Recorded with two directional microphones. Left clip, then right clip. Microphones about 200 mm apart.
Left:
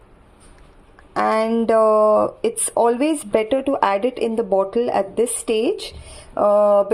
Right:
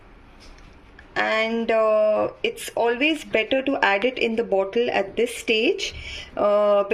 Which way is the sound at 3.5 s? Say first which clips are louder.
Left 1 dB; 20° left (ahead or behind).